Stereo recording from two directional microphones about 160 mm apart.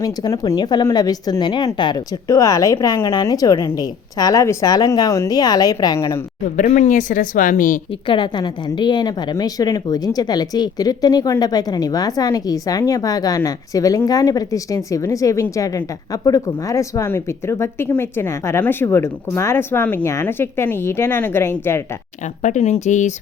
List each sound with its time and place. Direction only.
0.0 s a woman's voice: 25° left (ahead or behind)
6.6 s speech: 50° left (ahead or behind)
8.0 s a woman's voice: 30° left (ahead or behind); by 21.8 s 15° left (ahead or behind)
22.4 s speech: 45° left (ahead or behind)